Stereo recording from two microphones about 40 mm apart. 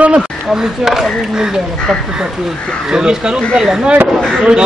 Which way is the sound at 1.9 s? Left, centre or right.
Centre.